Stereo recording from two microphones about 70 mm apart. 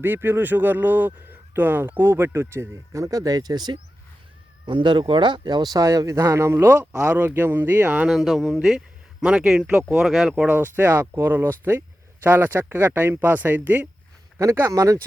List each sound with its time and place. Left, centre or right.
0.0 s speech: right
3.0 s speech: right
8.0 s speech: centre
10.3 s speech: right
14.7 s speech: right